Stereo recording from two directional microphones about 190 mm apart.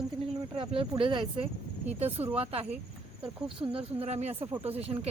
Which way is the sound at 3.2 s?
5° right (ahead or behind).